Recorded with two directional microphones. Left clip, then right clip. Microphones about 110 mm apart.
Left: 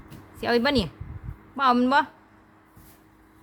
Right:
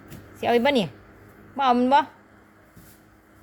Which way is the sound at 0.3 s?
10° left (ahead or behind).